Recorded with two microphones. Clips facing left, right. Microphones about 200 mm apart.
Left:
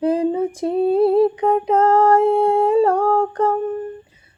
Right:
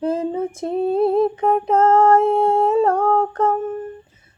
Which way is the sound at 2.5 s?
15° left (ahead or behind).